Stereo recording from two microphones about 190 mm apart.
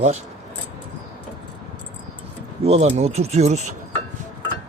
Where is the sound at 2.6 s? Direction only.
35° right (ahead or behind).